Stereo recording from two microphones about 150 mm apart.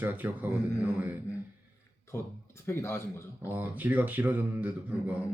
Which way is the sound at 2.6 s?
15° left (ahead or behind).